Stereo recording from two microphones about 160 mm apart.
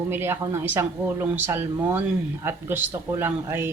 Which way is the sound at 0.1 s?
15° right (ahead or behind).